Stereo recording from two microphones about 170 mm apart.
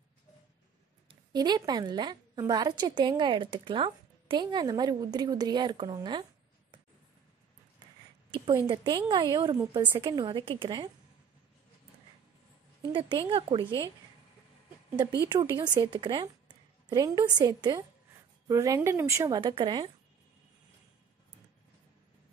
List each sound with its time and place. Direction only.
1.0 s a woman's voice: 25° right (ahead or behind)
8.5 s a woman's voice: 25° right (ahead or behind)
12.8 s a woman's voice: 30° right (ahead or behind)
15.5 s a woman's voice: 25° right (ahead or behind)
19.4 s a woman's voice: 30° right (ahead or behind)